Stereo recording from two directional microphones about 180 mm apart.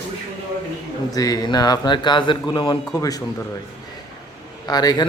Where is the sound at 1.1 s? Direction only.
20° left (ahead or behind).